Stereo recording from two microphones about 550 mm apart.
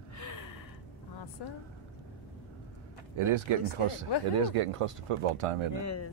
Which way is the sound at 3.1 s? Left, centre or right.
Right.